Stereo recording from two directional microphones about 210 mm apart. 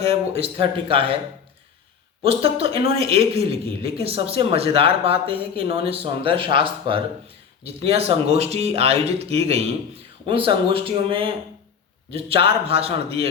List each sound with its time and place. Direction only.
0.0 s speech: 30° right (ahead or behind)
2.2 s speech: 25° right (ahead or behind)